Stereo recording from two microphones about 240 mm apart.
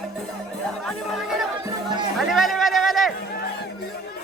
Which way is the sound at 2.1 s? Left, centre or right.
Centre.